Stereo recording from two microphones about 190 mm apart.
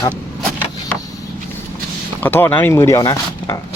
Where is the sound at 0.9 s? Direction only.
5° left (ahead or behind).